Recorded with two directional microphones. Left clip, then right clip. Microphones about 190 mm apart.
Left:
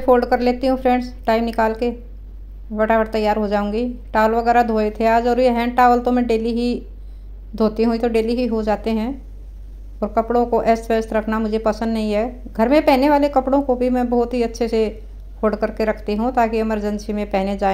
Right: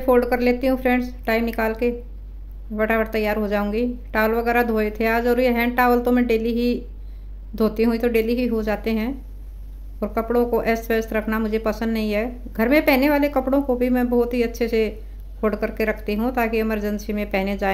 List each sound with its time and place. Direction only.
0.0 s speech: 5° left (ahead or behind)